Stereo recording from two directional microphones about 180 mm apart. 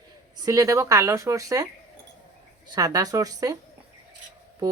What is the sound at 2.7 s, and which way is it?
Speech, 20° right (ahead or behind).